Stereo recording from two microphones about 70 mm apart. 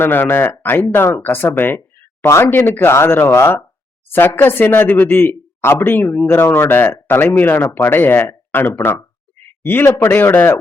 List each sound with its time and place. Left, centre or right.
0.0 s speech: left